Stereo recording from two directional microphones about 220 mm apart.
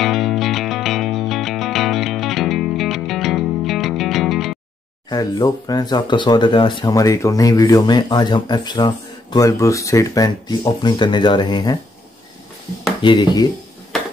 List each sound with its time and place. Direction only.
0.0 s music: centre (ahead or behind)
5.1 s speech: 15° left (ahead or behind)
13.0 s speech: 20° left (ahead or behind)